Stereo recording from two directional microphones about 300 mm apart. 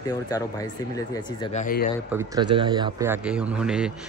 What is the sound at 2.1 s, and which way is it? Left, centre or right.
Speech, centre.